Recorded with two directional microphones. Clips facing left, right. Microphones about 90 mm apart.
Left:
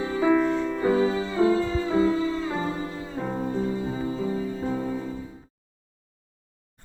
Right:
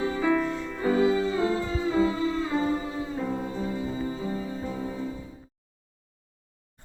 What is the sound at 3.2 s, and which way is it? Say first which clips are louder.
Music: left 3 dB; 45° left (ahead or behind).